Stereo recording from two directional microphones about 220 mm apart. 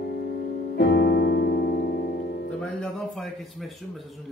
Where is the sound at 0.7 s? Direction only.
45° left (ahead or behind).